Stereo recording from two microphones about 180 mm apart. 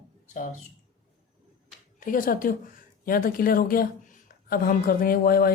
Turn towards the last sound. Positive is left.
turn(degrees=55)  # may be behind; listen again after turning